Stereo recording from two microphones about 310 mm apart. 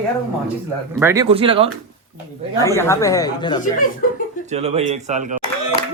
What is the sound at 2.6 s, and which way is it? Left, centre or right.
Speech, centre.